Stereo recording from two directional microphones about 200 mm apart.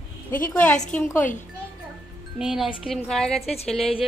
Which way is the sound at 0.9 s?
5° left (ahead or behind).